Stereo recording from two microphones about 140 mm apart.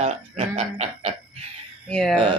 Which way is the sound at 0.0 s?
50° right (ahead or behind).